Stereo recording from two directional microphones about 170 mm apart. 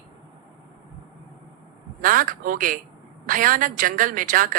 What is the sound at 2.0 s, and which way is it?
A woman's voice, 55° right (ahead or behind).